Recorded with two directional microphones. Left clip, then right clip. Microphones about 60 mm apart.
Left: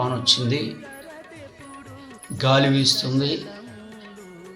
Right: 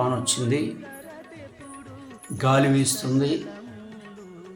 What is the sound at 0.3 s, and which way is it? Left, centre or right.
Speech, right.